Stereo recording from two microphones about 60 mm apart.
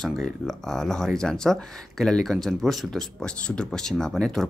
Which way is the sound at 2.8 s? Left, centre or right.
Centre.